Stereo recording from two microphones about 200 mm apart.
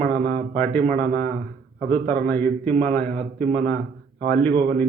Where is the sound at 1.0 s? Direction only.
50° right (ahead or behind).